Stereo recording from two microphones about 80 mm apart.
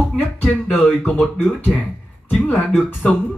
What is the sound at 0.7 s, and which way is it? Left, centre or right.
Speech, left.